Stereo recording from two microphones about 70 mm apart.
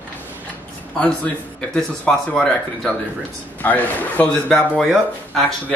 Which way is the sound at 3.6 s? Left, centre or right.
Left.